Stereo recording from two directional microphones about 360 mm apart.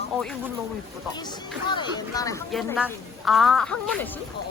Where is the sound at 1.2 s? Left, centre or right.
Centre.